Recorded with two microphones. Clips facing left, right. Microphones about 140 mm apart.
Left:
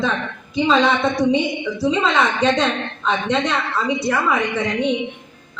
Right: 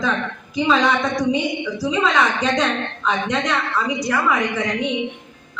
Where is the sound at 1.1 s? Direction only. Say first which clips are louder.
Left 2 dB; 25° left (ahead or behind).